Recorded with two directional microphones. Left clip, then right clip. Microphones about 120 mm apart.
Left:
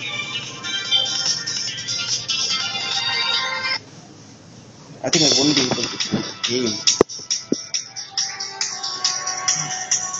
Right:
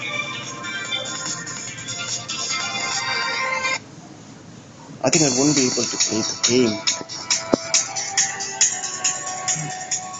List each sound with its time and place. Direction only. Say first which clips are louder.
0.0 s music: even; centre (ahead or behind)
5.1 s speech: left 4 dB; 25° right (ahead or behind)
5.6 s music: even; 45° right (ahead or behind)
8.4 s music: right 4 dB; 25° right (ahead or behind)